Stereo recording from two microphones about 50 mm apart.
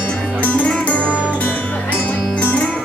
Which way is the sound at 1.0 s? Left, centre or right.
Right.